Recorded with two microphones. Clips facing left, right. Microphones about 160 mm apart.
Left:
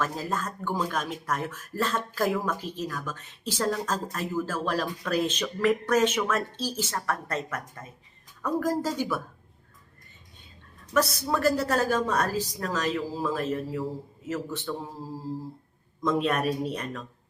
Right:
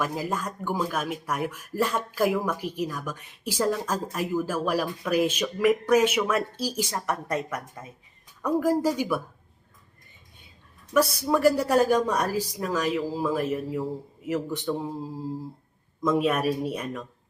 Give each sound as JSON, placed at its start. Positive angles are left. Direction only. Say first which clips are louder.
{"t": 0.0, "sound": "speech", "louder": "right 1 dB", "side_deg": -10}
{"t": 10.9, "sound": "speech", "louder": "right 3 dB", "side_deg": -10}
{"t": 16.0, "sound": "speech", "louder": "right 2 dB", "side_deg": -5}